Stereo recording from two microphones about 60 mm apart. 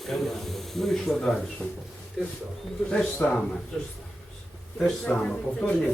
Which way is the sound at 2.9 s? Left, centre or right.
Left.